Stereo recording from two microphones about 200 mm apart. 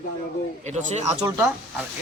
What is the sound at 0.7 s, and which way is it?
Speech, 35° right (ahead or behind).